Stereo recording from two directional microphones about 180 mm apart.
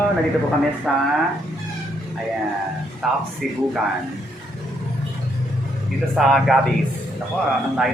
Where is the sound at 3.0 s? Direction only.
Centre (ahead or behind).